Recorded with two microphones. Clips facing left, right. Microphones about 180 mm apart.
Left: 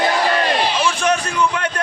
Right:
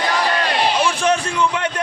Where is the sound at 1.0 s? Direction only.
25° right (ahead or behind).